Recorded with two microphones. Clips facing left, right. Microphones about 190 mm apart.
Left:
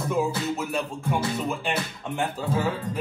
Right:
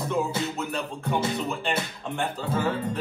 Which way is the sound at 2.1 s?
Centre (ahead or behind).